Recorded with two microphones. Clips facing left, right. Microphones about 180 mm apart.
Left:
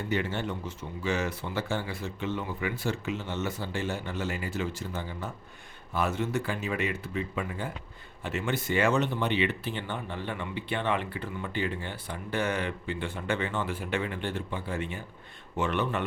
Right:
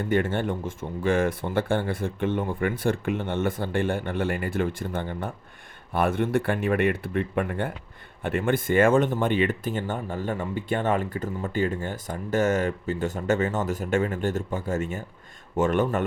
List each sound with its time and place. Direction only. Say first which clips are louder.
0.0 s speech: right 6 dB; 50° right (ahead or behind)